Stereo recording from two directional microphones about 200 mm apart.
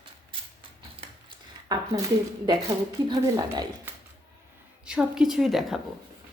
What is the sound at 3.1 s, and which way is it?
Speech, 20° right (ahead or behind).